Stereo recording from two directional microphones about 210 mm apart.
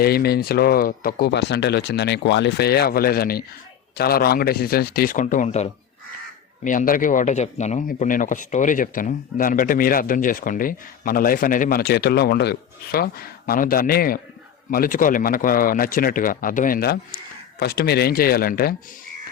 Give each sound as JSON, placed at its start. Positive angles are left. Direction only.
{"t": 0.0, "sound": "speech", "side_deg": 45}
{"t": 6.7, "sound": "speech", "side_deg": 40}